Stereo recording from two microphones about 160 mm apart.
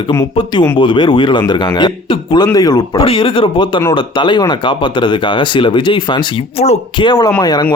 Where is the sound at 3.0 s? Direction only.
35° left (ahead or behind).